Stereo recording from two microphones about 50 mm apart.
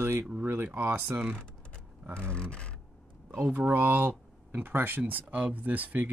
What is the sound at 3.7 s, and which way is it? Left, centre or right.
Speech, right.